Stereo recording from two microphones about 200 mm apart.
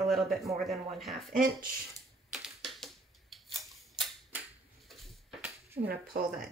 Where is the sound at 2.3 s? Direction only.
Centre (ahead or behind).